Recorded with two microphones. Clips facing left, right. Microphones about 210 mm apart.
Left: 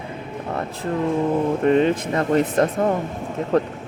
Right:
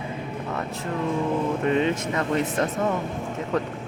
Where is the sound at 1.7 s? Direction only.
40° left (ahead or behind).